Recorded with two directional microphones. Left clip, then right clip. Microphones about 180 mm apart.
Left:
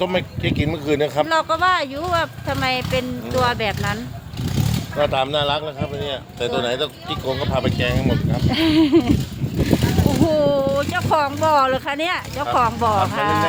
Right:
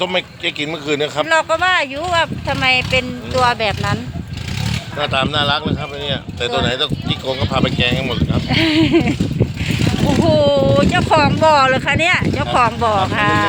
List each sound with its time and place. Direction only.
0.0 s speech: 35° left (ahead or behind)
1.3 s speech: 15° left (ahead or behind)
4.9 s speech: 50° left (ahead or behind); by 8.1 s 30° left (ahead or behind)
8.4 s speech: 15° left (ahead or behind)
10.2 s speech: 15° left (ahead or behind)
10.9 s speech: centre (ahead or behind)